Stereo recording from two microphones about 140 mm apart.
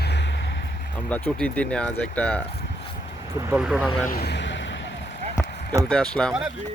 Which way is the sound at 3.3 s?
20° right (ahead or behind).